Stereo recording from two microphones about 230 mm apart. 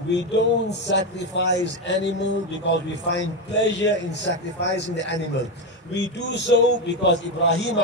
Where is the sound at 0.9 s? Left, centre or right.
Left.